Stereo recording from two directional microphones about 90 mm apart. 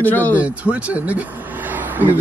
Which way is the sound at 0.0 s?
20° left (ahead or behind).